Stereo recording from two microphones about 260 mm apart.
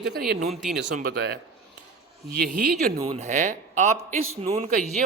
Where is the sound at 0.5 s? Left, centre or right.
Centre.